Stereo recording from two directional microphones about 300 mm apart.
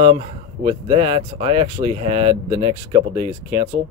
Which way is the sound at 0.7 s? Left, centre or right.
Centre.